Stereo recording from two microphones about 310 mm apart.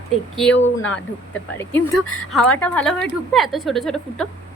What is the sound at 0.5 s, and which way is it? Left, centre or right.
Speech, left.